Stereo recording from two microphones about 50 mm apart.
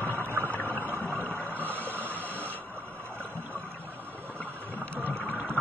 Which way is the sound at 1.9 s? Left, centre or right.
Right.